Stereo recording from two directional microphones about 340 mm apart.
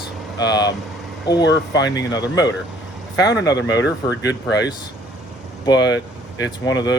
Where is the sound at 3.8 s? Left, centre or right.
Left.